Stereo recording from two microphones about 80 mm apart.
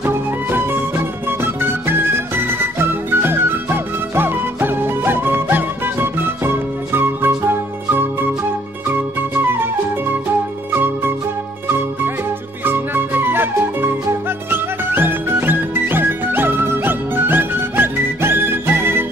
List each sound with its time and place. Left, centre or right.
0.0 s music: right
12.6 s flute: right
14.5 s music: right